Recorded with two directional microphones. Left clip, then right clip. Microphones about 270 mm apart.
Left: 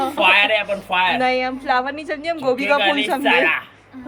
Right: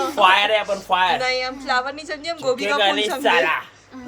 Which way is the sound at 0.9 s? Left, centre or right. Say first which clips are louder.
Even; centre.